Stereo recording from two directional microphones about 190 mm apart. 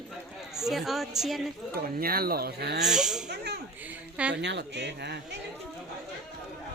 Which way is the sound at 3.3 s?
60° right (ahead or behind).